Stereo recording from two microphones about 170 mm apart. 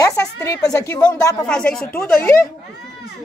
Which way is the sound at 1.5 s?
5° left (ahead or behind).